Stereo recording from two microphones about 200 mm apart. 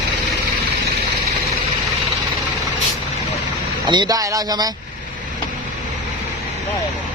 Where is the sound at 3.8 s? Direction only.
20° right (ahead or behind).